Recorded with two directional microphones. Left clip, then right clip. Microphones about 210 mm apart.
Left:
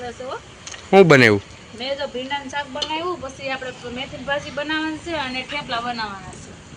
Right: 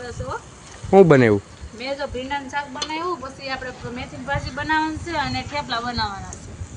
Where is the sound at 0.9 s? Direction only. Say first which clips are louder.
Left 1 dB; 10° right (ahead or behind).